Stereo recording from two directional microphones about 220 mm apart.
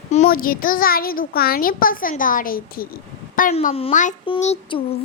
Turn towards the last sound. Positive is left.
turn(degrees=25)  # may be behind; listen again after turning